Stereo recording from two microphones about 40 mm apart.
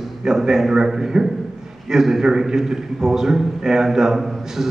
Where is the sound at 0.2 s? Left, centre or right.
Centre.